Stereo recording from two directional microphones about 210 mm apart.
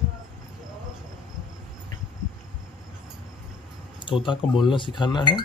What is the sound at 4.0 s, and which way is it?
Speech, 25° left (ahead or behind).